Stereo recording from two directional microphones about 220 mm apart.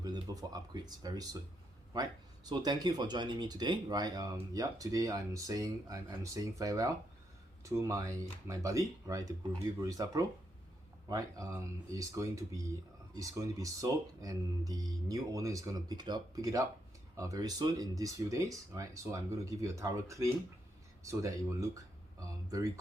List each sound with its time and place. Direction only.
0.0 s speech: 15° right (ahead or behind)